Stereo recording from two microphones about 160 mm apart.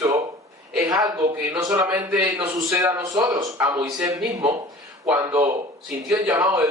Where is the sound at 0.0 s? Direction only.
20° right (ahead or behind).